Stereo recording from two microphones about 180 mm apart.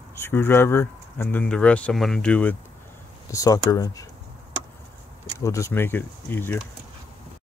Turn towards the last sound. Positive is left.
turn(degrees=10)  # may be behind; listen again after turning